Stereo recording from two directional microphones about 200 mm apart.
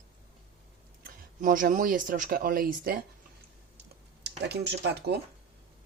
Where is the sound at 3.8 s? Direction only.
55° right (ahead or behind).